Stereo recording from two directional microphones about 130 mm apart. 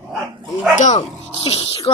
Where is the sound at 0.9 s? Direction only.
45° left (ahead or behind).